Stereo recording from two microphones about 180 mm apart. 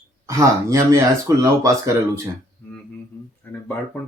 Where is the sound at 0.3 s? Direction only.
15° right (ahead or behind).